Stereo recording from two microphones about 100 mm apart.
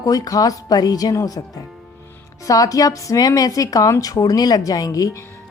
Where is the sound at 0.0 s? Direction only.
35° left (ahead or behind).